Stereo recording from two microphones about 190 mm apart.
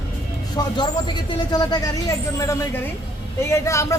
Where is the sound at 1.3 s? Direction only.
20° left (ahead or behind).